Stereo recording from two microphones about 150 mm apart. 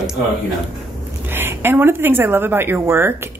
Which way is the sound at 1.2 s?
15° right (ahead or behind).